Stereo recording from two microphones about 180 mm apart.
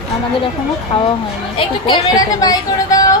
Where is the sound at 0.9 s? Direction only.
30° left (ahead or behind).